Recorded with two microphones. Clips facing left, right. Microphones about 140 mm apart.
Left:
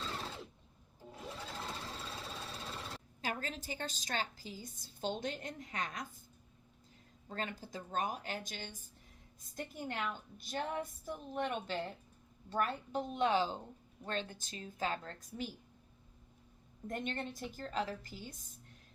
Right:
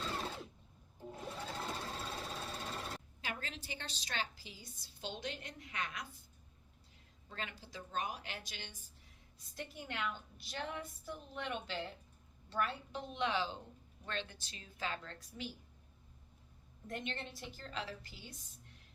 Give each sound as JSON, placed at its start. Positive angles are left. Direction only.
{"t": 1.1, "sound": "sewing machine", "side_deg": 0}
{"t": 3.2, "sound": "a woman's voice", "side_deg": 40}
{"t": 7.3, "sound": "a woman's voice", "side_deg": 45}
{"t": 16.8, "sound": "a woman's voice", "side_deg": 45}